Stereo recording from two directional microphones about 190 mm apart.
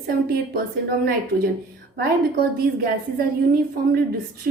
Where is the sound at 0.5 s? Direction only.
50° right (ahead or behind).